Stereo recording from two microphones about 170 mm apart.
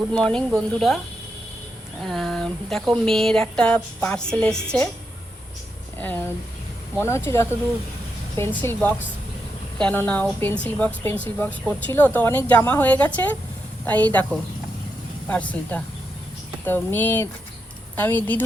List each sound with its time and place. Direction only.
0.1 s speech: 5° left (ahead or behind)
2.0 s speech: centre (ahead or behind)
6.0 s a woman's voice: 10° left (ahead or behind)
15.3 s a woman's voice: 10° left (ahead or behind)